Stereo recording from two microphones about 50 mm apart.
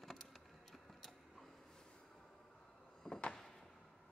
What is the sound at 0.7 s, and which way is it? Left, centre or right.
Biting, centre.